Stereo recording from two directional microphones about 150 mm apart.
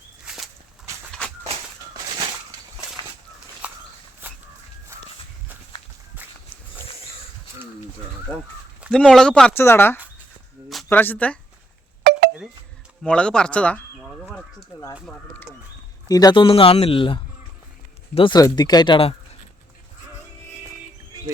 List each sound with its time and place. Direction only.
0.3 s walk: centre (ahead or behind)
3.6 s walk: 10° right (ahead or behind)
8.9 s speech: 5° left (ahead or behind)
13.0 s speech: 5° left (ahead or behind)
14.0 s a sound: 5° right (ahead or behind)
15.0 s a sound: 10° left (ahead or behind)
16.0 s speech: 25° left (ahead or behind)